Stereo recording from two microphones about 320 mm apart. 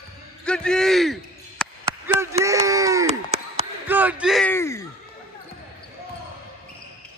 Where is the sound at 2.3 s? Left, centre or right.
Centre.